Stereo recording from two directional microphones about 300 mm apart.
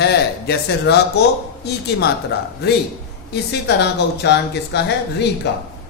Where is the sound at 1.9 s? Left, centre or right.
Left.